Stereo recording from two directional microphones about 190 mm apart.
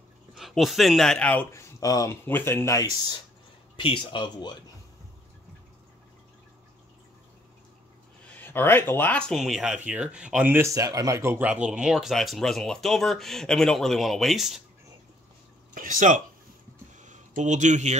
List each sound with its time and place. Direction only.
0.4 s speech: centre (ahead or behind); by 4.6 s 25° left (ahead or behind)
8.4 s speech: 10° left (ahead or behind)
15.7 s speech: 45° right (ahead or behind)
17.0 s a sound: 40° right (ahead or behind)